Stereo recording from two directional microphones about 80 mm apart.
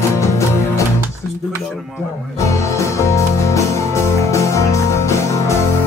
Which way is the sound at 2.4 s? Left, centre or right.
Left.